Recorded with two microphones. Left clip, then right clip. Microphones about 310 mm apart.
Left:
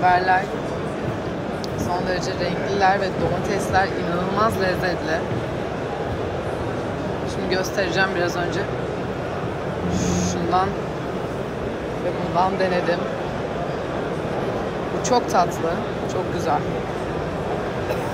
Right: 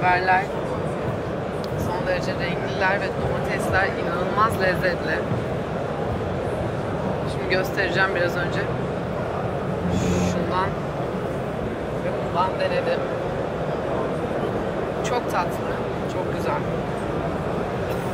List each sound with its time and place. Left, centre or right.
0.0 s speech: centre
4.4 s speech: centre
7.5 s speech: centre
10.0 s speech: centre
15.0 s speech: centre